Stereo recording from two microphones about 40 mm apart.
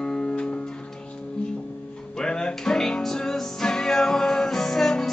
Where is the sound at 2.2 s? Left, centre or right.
Centre.